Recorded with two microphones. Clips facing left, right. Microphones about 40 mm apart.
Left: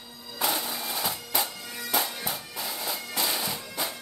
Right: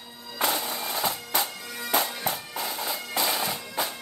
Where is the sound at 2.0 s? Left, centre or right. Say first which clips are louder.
Even; centre.